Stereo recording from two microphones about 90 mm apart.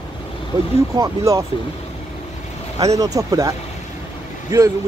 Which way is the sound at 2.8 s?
40° right (ahead or behind).